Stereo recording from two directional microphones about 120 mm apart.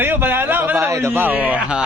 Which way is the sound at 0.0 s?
15° right (ahead or behind).